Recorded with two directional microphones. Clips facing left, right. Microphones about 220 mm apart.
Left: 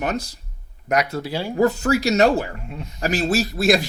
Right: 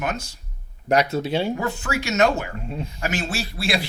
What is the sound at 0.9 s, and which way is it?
Speech, 25° right (ahead or behind).